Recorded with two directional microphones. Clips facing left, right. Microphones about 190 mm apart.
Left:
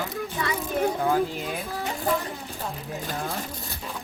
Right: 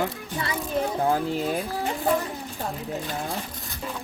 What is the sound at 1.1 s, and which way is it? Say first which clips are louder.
Speech: right 1 dB; 35° right (ahead or behind).